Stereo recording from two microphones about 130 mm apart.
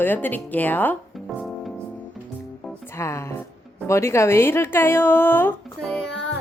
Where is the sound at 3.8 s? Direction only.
20° left (ahead or behind).